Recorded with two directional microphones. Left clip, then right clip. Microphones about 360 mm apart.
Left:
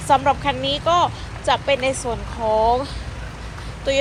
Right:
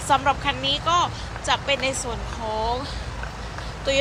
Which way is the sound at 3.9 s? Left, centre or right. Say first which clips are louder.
Left 2 dB; centre.